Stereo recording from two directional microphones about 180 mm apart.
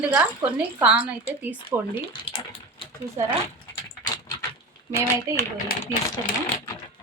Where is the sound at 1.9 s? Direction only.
30° left (ahead or behind).